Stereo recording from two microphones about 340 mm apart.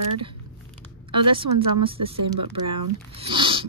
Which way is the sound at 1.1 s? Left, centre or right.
Centre.